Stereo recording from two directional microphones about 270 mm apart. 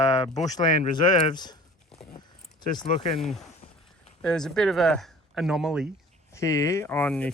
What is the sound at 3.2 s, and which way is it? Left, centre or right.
Speech, centre.